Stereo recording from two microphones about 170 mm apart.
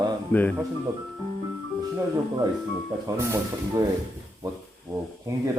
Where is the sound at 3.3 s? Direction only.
15° right (ahead or behind).